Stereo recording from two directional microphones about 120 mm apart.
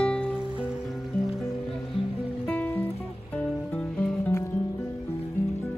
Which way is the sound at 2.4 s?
5° left (ahead or behind).